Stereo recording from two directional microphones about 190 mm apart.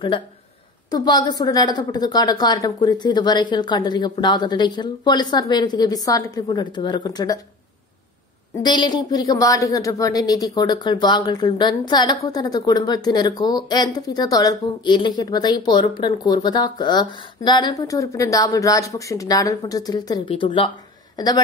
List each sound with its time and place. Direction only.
0.8 s a woman's voice: 20° left (ahead or behind)
8.6 s a woman's voice: 20° left (ahead or behind)